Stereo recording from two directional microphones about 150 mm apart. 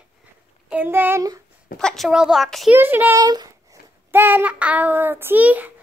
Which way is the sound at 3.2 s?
25° right (ahead or behind).